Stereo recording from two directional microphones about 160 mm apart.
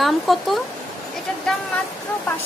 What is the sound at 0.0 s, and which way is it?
Speech, centre (ahead or behind).